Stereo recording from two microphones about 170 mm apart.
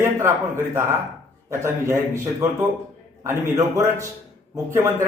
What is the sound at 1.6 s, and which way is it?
Speech, 15° right (ahead or behind).